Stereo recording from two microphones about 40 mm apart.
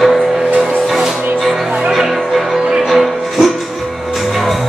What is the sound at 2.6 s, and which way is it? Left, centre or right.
Music, centre.